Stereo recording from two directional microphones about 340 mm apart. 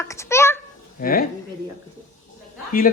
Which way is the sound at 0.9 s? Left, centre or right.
Left.